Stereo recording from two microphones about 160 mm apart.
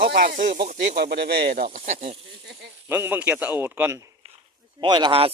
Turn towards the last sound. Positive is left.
turn(degrees=-35)  # may be behind; listen again after turning